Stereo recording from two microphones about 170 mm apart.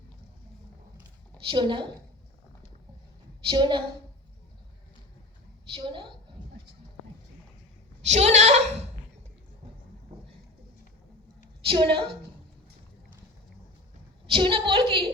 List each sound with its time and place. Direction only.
1.5 s a woman's voice: 30° right (ahead or behind)
3.4 s a woman's voice: 25° right (ahead or behind)
5.7 s a woman's voice: 30° right (ahead or behind)
8.0 s a woman's voice: 40° right (ahead or behind)
11.6 s a woman's voice: 30° right (ahead or behind)
14.3 s a woman's voice: 30° right (ahead or behind)